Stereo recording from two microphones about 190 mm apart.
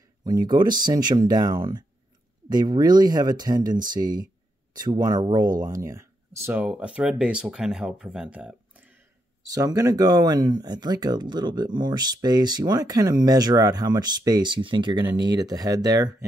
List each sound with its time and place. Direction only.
0.5 s speech: 25° right (ahead or behind)